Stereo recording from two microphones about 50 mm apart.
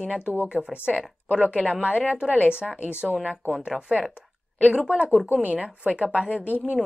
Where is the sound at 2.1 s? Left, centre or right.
Centre.